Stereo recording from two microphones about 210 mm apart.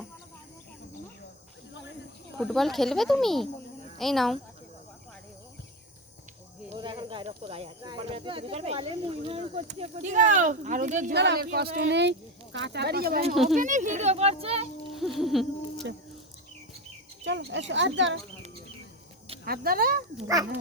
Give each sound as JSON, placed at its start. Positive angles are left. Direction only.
{"t": 2.4, "sound": "speech", "side_deg": 0}
{"t": 6.7, "sound": "speech", "side_deg": -25}
{"t": 11.1, "sound": "speech", "side_deg": -55}
{"t": 13.3, "sound": "speech", "side_deg": 0}
{"t": 13.6, "sound": "speech", "side_deg": -35}
{"t": 14.9, "sound": "speech", "side_deg": 0}
{"t": 17.2, "sound": "speech", "side_deg": -60}
{"t": 19.5, "sound": "speech", "side_deg": -45}
{"t": 20.2, "sound": "speech", "side_deg": -15}